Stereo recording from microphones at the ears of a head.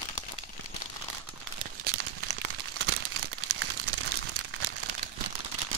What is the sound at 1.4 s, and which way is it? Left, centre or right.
Crumpling, right.